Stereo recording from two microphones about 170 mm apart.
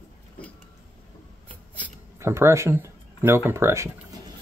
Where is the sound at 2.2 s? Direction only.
15° right (ahead or behind).